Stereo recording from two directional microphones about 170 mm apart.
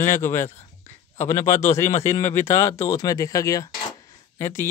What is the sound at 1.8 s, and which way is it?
Speech, 15° left (ahead or behind).